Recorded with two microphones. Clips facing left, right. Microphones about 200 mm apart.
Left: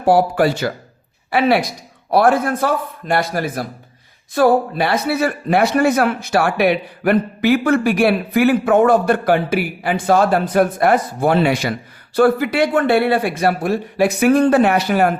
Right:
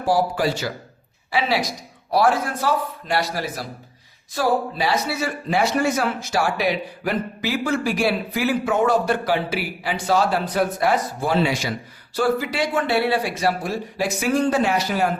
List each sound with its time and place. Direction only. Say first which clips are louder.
0.0 s a man's voice: left 6 dB; 60° left (ahead or behind)